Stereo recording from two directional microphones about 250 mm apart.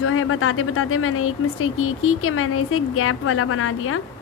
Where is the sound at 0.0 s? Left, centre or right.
Left.